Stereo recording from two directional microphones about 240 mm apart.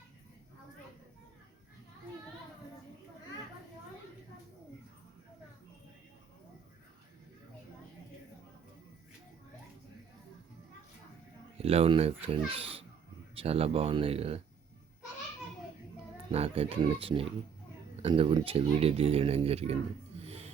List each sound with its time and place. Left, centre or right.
11.5 s speech: right
16.3 s speech: right
20.2 s music: right